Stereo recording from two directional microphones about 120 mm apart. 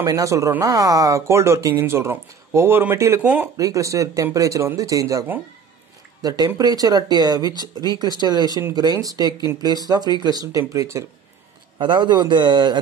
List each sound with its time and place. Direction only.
0.0 s speech: 30° right (ahead or behind)
3.5 s speech: 30° right (ahead or behind)
11.8 s speech: 40° right (ahead or behind)